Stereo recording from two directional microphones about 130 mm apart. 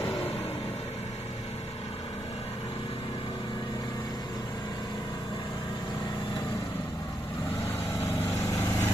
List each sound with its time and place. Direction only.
8.5 s vehicle: 20° left (ahead or behind)